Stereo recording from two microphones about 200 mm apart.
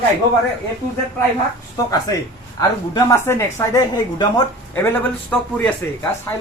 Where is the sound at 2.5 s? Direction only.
15° left (ahead or behind).